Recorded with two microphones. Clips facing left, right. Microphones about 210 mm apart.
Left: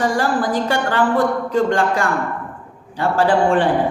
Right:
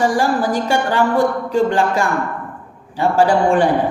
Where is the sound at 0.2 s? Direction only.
10° right (ahead or behind).